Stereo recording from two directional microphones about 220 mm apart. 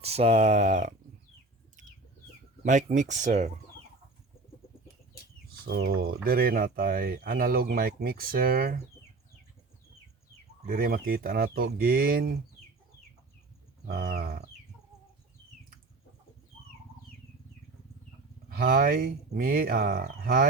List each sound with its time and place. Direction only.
0.0 s speech: 30° right (ahead or behind)
2.6 s speech: 35° right (ahead or behind)
5.6 s speech: 45° right (ahead or behind)
10.7 s speech: 45° right (ahead or behind)
13.8 s speech: 45° right (ahead or behind)
18.4 s speech: 40° right (ahead or behind)